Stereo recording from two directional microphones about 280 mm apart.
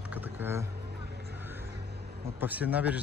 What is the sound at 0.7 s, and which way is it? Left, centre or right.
Vehicle, right.